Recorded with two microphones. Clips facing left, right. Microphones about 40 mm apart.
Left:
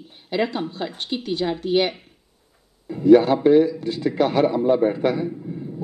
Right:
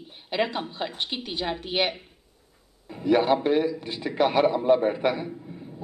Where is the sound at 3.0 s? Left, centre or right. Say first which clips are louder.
Left 7 dB; right.